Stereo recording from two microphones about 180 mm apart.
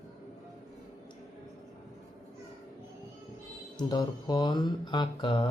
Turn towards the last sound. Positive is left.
turn(degrees=25)  # may be behind; listen again after turning